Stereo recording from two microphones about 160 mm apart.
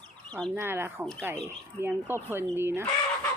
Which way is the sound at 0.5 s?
15° right (ahead or behind).